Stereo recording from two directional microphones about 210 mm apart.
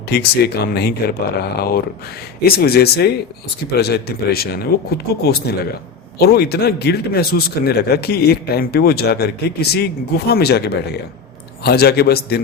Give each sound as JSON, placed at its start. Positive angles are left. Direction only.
{"t": 0.1, "sound": "a man's voice", "side_deg": 50}